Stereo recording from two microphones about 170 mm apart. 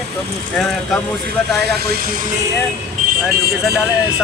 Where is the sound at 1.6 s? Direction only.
70° right (ahead or behind).